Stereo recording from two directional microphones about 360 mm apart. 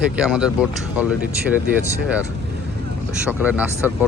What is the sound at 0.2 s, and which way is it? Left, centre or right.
Speech, centre.